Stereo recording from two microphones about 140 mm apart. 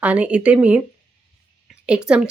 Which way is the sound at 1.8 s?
5° right (ahead or behind).